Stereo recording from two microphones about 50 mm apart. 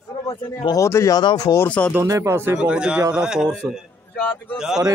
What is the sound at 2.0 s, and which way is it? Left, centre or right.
Speech, right.